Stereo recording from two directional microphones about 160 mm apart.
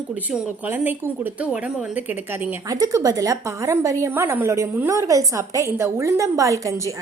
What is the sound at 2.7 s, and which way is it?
A woman's voice, 20° right (ahead or behind).